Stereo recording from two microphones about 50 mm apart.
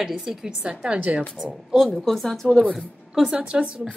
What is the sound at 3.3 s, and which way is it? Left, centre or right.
Speech, right.